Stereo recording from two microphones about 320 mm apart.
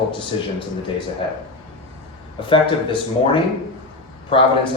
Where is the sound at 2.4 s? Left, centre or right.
Centre.